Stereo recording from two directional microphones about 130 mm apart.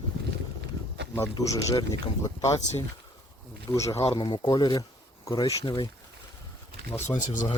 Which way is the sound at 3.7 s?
25° left (ahead or behind).